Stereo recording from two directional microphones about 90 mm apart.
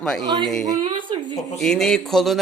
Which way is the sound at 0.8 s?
60° right (ahead or behind).